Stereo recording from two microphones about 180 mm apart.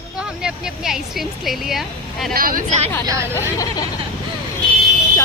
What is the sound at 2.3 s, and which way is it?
Speech, 50° right (ahead or behind).